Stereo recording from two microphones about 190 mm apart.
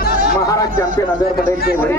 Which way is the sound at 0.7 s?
45° right (ahead or behind).